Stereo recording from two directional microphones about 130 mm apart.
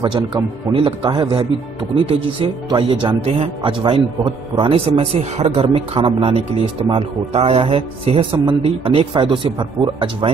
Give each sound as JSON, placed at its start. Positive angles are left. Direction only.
{"t": 0.0, "sound": "a man's voice", "side_deg": -35}